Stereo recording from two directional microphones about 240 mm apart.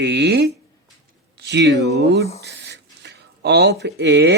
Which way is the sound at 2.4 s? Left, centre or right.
Right.